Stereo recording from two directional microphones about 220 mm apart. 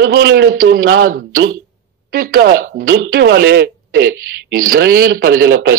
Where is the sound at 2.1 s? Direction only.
40° right (ahead or behind).